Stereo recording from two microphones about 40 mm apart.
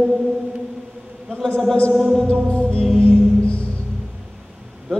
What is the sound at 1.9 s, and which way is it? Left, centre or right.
Music, centre.